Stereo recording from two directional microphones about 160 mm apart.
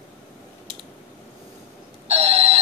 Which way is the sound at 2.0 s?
40° right (ahead or behind).